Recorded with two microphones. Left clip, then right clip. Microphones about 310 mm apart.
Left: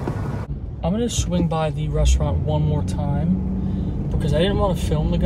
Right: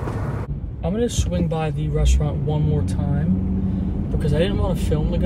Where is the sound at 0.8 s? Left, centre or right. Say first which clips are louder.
Right 1 dB; centre.